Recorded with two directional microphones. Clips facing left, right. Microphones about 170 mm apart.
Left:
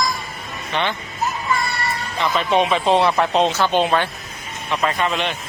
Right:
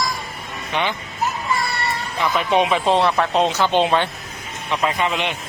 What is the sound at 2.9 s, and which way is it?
Speech, 10° left (ahead or behind).